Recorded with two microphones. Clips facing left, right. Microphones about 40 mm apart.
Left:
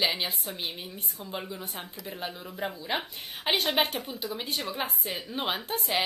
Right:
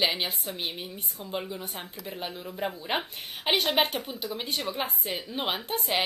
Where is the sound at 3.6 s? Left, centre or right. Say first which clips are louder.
Right 1 dB; centre.